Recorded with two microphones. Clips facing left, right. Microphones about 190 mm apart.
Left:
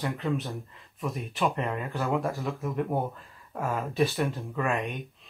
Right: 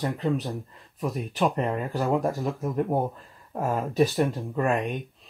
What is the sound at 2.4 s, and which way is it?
Speech, centre (ahead or behind).